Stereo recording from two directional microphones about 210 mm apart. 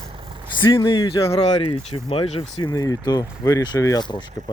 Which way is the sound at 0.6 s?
25° left (ahead or behind).